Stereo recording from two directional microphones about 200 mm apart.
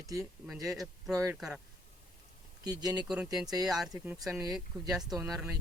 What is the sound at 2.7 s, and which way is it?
Speech, 20° right (ahead or behind).